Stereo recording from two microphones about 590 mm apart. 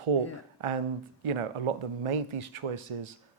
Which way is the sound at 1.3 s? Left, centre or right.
Right.